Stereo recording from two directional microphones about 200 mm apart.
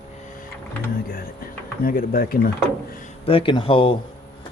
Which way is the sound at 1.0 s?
45° left (ahead or behind).